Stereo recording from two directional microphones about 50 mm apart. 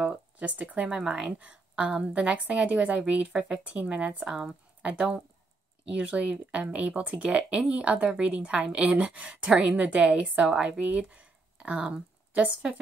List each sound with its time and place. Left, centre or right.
0.0 s speech: right
0.8 s a woman's voice: centre